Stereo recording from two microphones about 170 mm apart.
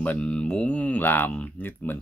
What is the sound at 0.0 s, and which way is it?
Speech, 10° left (ahead or behind).